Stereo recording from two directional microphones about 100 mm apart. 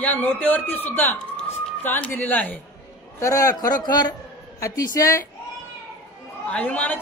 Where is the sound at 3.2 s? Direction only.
35° left (ahead or behind).